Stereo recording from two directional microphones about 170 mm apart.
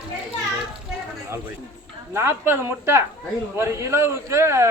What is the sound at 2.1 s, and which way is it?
Speech, 15° right (ahead or behind).